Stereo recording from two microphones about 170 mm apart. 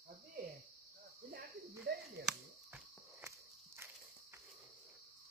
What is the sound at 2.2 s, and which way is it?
Walk, 10° right (ahead or behind).